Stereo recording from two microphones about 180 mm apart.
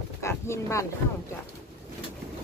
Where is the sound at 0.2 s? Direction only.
15° left (ahead or behind).